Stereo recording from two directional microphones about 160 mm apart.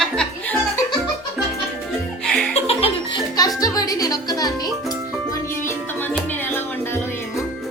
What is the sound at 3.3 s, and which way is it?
Music, 20° left (ahead or behind).